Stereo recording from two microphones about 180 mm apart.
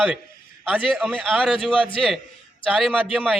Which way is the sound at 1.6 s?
30° left (ahead or behind).